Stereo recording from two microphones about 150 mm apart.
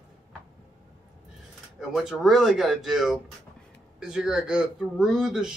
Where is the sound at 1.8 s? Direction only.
5° right (ahead or behind).